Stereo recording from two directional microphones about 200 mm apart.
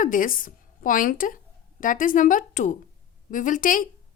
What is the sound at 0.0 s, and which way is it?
A woman's voice, 40° left (ahead or behind).